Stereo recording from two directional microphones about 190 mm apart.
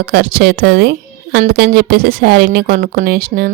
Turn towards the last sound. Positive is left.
turn(degrees=-50)  # may be behind; listen again after turning